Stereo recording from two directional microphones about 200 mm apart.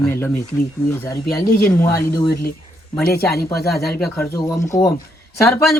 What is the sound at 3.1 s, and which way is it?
Speech, 50° left (ahead or behind).